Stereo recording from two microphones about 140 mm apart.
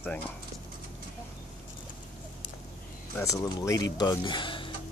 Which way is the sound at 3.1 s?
20° left (ahead or behind).